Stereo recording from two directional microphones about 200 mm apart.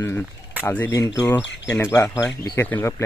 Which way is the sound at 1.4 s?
60° left (ahead or behind).